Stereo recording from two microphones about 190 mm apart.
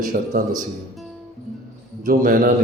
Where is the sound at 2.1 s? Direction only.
50° right (ahead or behind).